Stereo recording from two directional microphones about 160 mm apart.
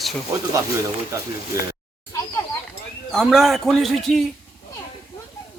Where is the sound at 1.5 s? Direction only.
20° right (ahead or behind).